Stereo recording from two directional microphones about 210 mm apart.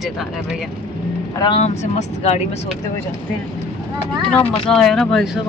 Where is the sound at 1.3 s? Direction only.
25° left (ahead or behind).